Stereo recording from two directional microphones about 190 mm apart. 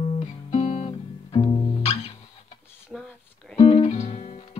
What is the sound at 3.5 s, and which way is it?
Music, 30° left (ahead or behind).